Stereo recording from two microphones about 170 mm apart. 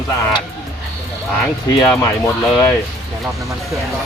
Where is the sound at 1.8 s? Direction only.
15° left (ahead or behind).